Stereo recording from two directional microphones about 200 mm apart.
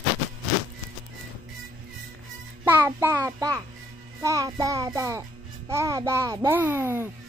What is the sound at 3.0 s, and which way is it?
Child singing, 15° right (ahead or behind).